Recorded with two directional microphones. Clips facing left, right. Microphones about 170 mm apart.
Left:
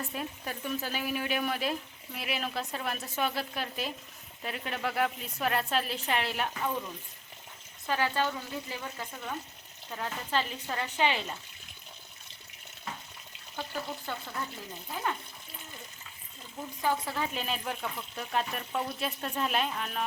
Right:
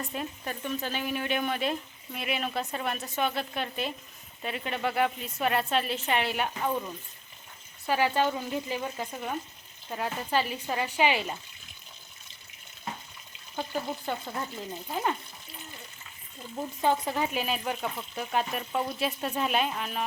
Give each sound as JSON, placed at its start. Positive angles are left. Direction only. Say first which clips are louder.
{"t": 0.0, "sound": "speech", "louder": "right 2 dB", "side_deg": 0}
{"t": 7.9, "sound": "speech", "louder": "right 4 dB", "side_deg": -15}
{"t": 13.6, "sound": "frying", "louder": "right 4 dB", "side_deg": -20}
{"t": 16.8, "sound": "frying", "louder": "right 4 dB", "side_deg": -20}
{"t": 17.3, "sound": "speech", "louder": "right 4 dB", "side_deg": -5}